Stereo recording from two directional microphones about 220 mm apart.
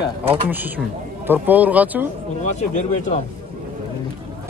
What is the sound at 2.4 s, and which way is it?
Speech, 35° left (ahead or behind).